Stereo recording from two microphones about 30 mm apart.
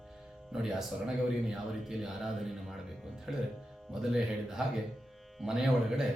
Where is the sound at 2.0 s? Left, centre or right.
Centre.